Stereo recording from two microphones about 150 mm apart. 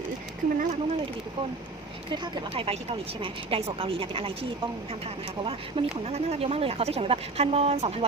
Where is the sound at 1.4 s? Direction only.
35° right (ahead or behind).